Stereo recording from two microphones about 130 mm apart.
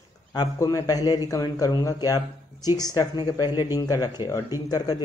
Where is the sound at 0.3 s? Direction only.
30° left (ahead or behind).